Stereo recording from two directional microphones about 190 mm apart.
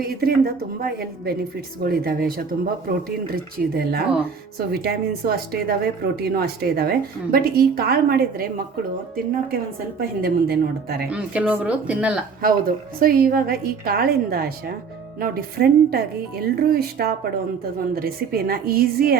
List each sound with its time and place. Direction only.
0.0 s a woman's voice: 55° right (ahead or behind)
10.2 s a woman's voice: 55° right (ahead or behind)
11.1 s speech: 5° right (ahead or behind)
12.4 s a woman's voice: 50° right (ahead or behind)